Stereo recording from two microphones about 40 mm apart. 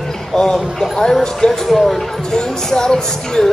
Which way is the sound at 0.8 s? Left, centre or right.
Centre.